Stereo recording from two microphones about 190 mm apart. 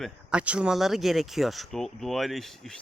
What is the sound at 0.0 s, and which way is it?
Speech, 5° right (ahead or behind).